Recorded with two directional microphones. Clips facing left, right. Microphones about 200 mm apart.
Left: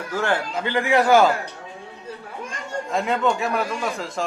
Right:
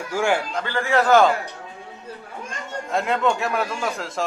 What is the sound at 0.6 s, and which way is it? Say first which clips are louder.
Speech: left 5 dB; 15° left (ahead or behind).